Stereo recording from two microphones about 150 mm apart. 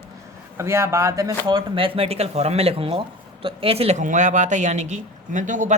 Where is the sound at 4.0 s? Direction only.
60° right (ahead or behind).